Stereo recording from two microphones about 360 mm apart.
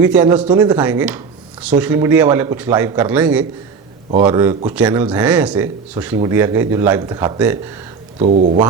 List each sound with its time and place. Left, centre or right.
0.0 s a man's voice: centre
8.2 s speech: right